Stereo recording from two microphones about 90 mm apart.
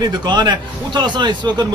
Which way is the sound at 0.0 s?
50° right (ahead or behind).